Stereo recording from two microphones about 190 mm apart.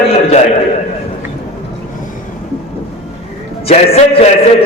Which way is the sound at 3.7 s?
30° left (ahead or behind).